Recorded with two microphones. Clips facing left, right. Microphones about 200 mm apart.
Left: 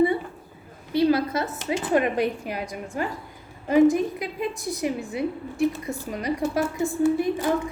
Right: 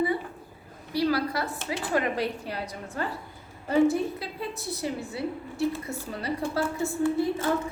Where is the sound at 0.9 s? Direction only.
20° left (ahead or behind).